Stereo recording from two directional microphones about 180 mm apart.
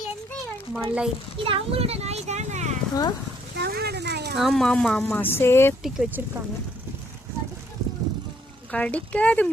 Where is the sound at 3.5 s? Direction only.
65° right (ahead or behind).